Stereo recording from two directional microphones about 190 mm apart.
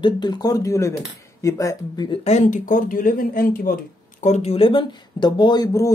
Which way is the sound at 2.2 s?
35° left (ahead or behind).